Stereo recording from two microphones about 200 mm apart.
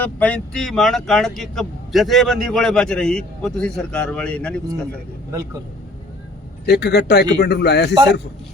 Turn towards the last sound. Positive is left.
turn(degrees=55)  # may be behind; listen again after turning